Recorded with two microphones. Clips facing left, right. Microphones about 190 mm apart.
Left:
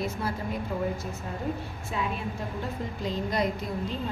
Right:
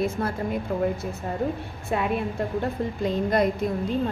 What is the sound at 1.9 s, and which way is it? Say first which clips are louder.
A woman's voice: right 7 dB; 60° right (ahead or behind).